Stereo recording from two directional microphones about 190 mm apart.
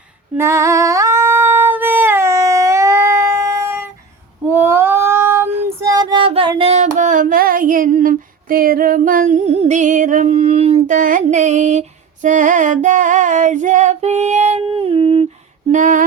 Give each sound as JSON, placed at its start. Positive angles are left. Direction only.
{"t": 0.3, "sound": "singing", "side_deg": -15}
{"t": 4.5, "sound": "child singing", "side_deg": -10}
{"t": 6.6, "sound": "female singing", "side_deg": -35}
{"t": 15.7, "sound": "female singing", "side_deg": -45}